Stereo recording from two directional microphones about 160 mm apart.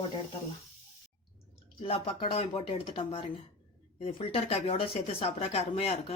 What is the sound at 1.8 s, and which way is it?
Speech, 35° left (ahead or behind).